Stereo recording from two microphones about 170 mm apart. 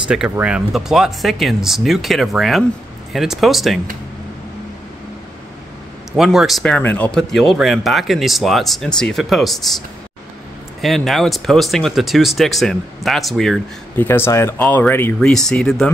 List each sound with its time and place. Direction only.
0.1 s speech: 5° right (ahead or behind)
6.1 s speech: centre (ahead or behind)
10.8 s speech: centre (ahead or behind)